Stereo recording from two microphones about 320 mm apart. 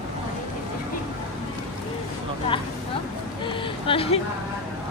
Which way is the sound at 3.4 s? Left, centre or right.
Centre.